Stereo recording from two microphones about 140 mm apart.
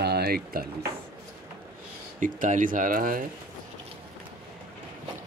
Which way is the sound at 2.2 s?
70° right (ahead or behind).